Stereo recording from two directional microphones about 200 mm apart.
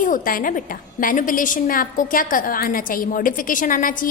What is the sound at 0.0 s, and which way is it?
A woman's voice, 45° left (ahead or behind).